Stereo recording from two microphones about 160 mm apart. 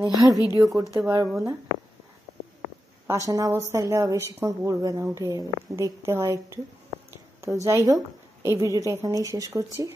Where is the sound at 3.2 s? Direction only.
20° right (ahead or behind).